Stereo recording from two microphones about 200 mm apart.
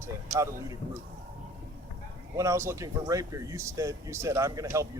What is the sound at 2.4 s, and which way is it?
Speech, 15° right (ahead or behind).